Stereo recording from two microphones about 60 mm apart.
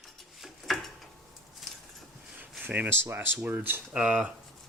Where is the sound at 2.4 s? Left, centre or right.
Right.